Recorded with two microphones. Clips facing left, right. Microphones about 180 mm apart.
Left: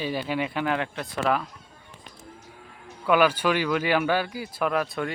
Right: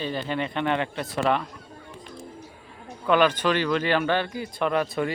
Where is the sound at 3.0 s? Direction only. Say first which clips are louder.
Even; 10° left (ahead or behind).